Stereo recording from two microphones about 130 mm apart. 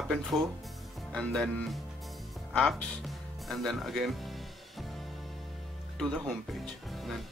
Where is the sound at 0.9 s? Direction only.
5° left (ahead or behind).